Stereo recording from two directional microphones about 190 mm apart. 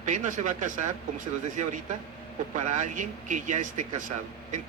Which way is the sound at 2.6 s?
40° right (ahead or behind).